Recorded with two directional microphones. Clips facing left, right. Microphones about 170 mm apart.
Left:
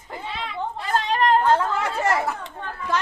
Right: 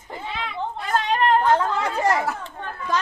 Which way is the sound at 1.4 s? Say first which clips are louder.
Even; 15° right (ahead or behind).